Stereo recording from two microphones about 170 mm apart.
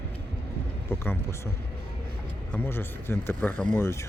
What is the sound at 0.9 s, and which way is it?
Speech, 15° left (ahead or behind).